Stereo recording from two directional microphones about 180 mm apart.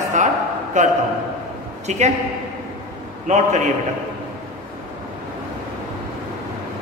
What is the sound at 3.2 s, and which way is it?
Speech, 40° right (ahead or behind).